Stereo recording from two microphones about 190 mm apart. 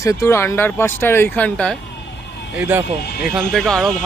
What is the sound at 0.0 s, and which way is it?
Speech, 15° left (ahead or behind).